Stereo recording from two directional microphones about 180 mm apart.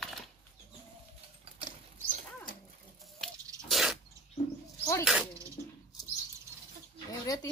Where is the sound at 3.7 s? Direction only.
Centre (ahead or behind).